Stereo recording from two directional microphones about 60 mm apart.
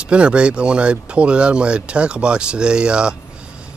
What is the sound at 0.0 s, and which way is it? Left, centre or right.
Speech, centre.